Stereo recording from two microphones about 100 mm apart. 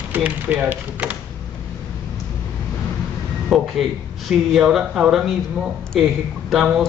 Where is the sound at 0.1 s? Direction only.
15° right (ahead or behind).